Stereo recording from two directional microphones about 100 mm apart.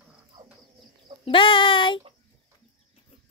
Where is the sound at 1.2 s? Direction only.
60° left (ahead or behind).